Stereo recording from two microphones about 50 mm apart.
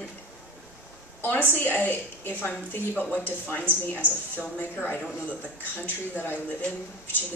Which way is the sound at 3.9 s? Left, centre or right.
Right.